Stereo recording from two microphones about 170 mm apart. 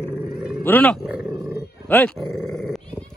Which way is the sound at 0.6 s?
10° left (ahead or behind).